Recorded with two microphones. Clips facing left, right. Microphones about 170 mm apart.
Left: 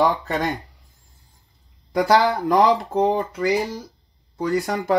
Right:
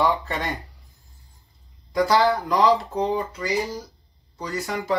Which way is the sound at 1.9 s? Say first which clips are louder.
Left 2 dB; 55° left (ahead or behind).